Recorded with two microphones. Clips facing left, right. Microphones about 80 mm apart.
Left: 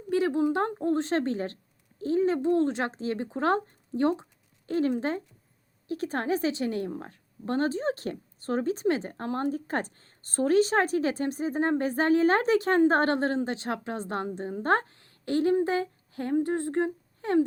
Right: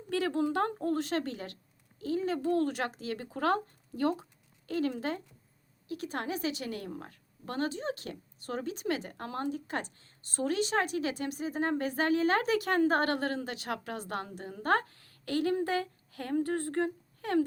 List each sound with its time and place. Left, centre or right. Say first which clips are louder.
0.1 s a woman's voice: left 5 dB; left